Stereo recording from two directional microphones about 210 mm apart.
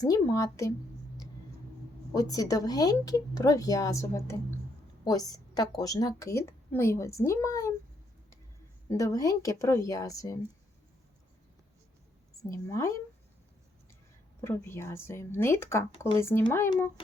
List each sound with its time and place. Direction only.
0.0 s a woman's voice: 15° left (ahead or behind)
2.1 s a woman's voice: 15° left (ahead or behind)
8.9 s a woman's voice: 15° left (ahead or behind)
12.4 s a woman's voice: 15° left (ahead or behind)
14.4 s a woman's voice: 10° left (ahead or behind)